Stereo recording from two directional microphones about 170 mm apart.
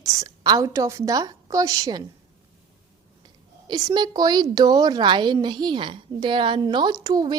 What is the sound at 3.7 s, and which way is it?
Speech, 25° right (ahead or behind).